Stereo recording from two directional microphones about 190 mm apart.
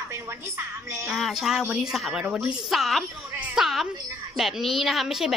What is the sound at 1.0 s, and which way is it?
A woman's voice, centre (ahead or behind).